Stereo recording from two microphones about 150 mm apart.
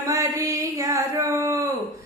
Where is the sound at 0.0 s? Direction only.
20° right (ahead or behind).